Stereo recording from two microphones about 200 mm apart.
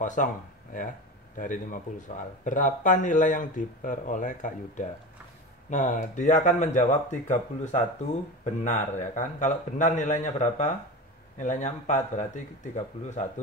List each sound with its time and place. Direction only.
0.0 s speech: 40° left (ahead or behind)
1.3 s speech: 40° left (ahead or behind)